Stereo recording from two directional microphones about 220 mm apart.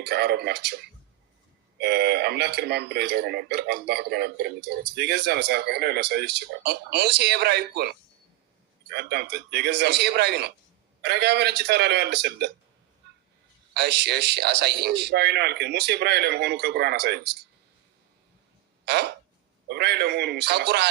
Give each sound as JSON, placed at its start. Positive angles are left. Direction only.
{"t": 0.0, "sound": "speech", "side_deg": -50}
{"t": 1.8, "sound": "speech", "side_deg": -50}
{"t": 13.0, "sound": "a sound", "side_deg": -50}
{"t": 13.7, "sound": "speech", "side_deg": -50}
{"t": 19.6, "sound": "speech", "side_deg": -50}